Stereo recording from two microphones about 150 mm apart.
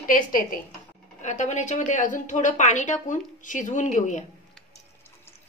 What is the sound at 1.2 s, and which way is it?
A woman's voice, 50° left (ahead or behind).